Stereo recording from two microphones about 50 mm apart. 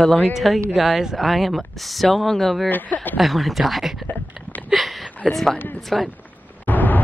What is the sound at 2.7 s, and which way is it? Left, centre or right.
Speech, left.